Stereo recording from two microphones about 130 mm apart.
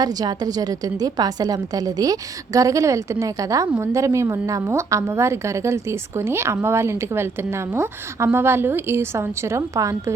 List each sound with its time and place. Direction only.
0.0 s a woman's voice: 30° right (ahead or behind)